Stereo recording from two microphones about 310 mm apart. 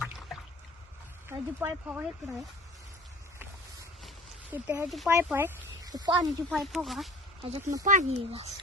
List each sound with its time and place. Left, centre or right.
1.3 s speech: centre
4.5 s speech: centre
6.5 s speech: centre
7.4 s speech: centre